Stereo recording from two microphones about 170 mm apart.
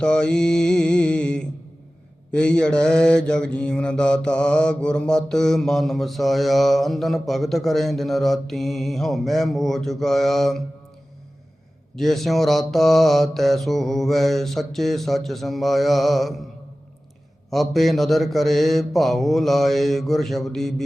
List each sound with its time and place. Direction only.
0.0 s mantra: 5° left (ahead or behind)
11.9 s mantra: centre (ahead or behind)
17.5 s mantra: centre (ahead or behind)